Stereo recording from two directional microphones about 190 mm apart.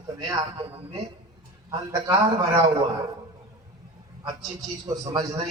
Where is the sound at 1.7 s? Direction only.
25° right (ahead or behind).